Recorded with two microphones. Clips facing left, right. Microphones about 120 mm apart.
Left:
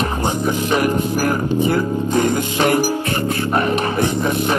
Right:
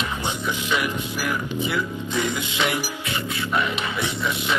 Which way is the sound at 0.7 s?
45° left (ahead or behind).